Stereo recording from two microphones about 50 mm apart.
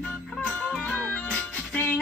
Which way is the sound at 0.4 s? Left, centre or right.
Left.